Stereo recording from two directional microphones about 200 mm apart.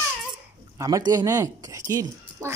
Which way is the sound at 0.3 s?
20° right (ahead or behind).